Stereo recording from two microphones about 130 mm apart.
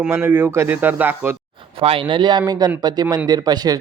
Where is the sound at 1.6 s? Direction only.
45° right (ahead or behind).